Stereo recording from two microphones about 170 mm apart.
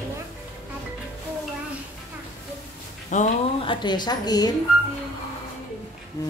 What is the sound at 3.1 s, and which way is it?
Speech, 45° left (ahead or behind).